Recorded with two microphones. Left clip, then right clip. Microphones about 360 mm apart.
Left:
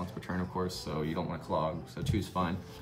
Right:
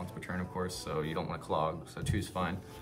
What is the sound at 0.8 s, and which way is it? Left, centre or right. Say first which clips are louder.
Speech: even; centre.